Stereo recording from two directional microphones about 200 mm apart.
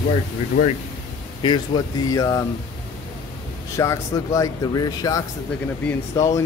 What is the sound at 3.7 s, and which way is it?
Speech, 15° left (ahead or behind).